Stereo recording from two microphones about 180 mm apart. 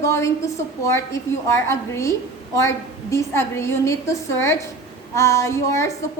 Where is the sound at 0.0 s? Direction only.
15° left (ahead or behind).